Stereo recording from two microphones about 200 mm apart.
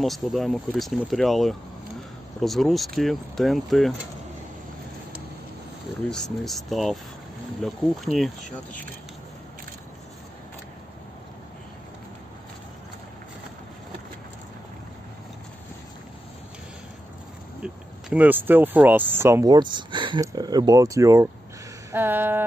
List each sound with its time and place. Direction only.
0.0 s speech: centre (ahead or behind)
6.0 s speech: 5° left (ahead or behind)
18.1 s speech: 10° right (ahead or behind)